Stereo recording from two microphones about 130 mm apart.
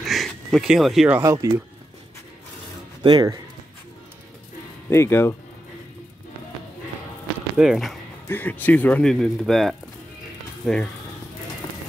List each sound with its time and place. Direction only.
0.0 s a sound: centre (ahead or behind)
1.2 s speech: 25° right (ahead or behind)
3.0 s speech: 35° right (ahead or behind)
4.8 s speech: 20° left (ahead or behind)
7.5 s speech: 5° right (ahead or behind)
8.3 s speech: 15° left (ahead or behind)